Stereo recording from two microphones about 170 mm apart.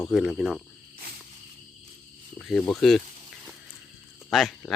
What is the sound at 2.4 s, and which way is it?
Speech, 5° left (ahead or behind).